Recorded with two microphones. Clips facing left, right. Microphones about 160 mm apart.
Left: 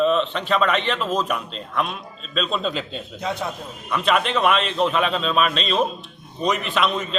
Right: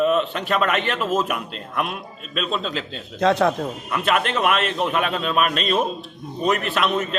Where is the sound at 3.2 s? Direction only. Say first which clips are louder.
Right 10 dB; 90° right.